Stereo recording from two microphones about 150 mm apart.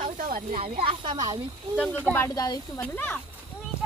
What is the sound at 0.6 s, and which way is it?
Speech, 35° right (ahead or behind).